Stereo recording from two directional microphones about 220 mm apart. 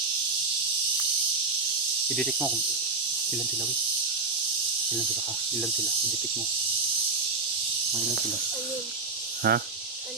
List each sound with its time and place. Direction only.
2.1 s speech: 5° left (ahead or behind)
9.5 s speech: 45° right (ahead or behind)